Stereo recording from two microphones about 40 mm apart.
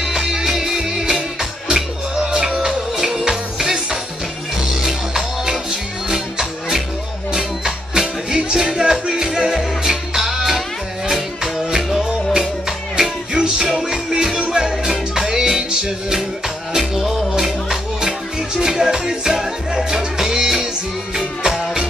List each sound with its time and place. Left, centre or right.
0.0 s music: centre